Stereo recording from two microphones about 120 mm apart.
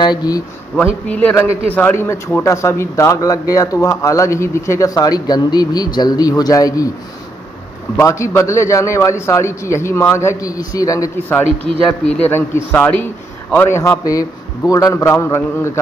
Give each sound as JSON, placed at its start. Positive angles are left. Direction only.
{"t": 0.0, "sound": "speech", "side_deg": 35}
{"t": 1.0, "sound": "a man's voice", "side_deg": 10}
{"t": 7.9, "sound": "speech", "side_deg": 20}
{"t": 12.0, "sound": "a man's voice", "side_deg": 10}